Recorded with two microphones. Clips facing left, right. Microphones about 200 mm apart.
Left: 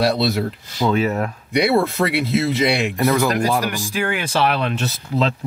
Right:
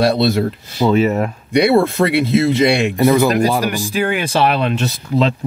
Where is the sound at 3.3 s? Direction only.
20° right (ahead or behind).